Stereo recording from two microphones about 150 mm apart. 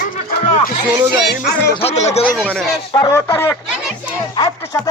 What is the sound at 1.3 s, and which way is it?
Music, 90° left.